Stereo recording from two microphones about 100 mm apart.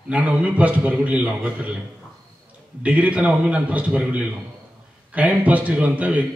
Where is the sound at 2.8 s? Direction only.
15° right (ahead or behind).